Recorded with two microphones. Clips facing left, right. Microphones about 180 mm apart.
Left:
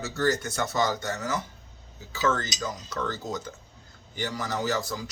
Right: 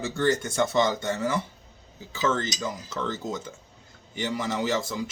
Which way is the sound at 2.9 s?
25° right (ahead or behind).